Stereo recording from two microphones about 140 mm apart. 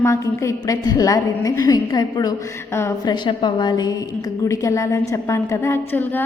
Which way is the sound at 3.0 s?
35° left (ahead or behind).